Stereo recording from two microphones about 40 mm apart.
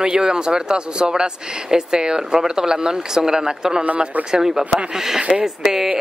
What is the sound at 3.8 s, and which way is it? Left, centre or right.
Speech, right.